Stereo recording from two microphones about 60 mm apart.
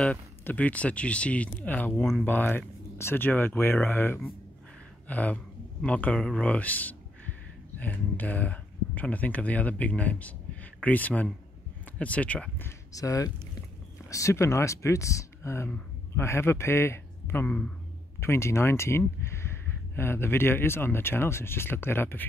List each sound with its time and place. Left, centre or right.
0.4 s speech: left
5.0 s speech: left
12.9 s speech: left
14.0 s a man's voice: left